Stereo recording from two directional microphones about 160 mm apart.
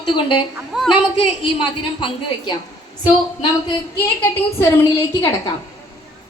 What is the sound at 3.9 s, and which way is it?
A woman's voice, 15° left (ahead or behind).